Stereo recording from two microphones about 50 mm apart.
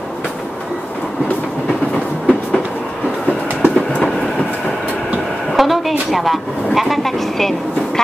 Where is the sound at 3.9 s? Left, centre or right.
Centre.